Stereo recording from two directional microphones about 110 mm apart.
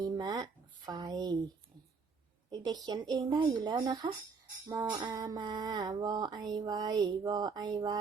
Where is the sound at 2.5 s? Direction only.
40° right (ahead or behind).